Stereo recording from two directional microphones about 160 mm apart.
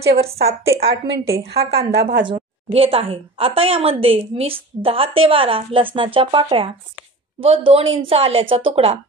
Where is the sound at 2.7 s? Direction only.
35° right (ahead or behind).